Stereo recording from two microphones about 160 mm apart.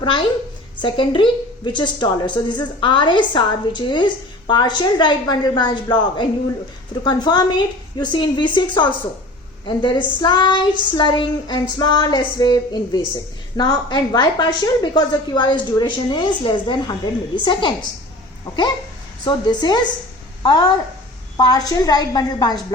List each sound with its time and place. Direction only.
0.0 s a woman's voice: 30° left (ahead or behind)
19.2 s a woman's voice: 25° left (ahead or behind)